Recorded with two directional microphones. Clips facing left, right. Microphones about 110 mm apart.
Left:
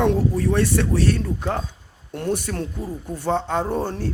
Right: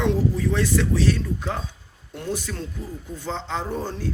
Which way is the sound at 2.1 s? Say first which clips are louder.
Left 5 dB; 55° left (ahead or behind).